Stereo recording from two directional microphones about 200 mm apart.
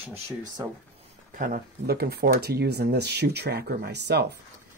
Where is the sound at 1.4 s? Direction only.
50° right (ahead or behind).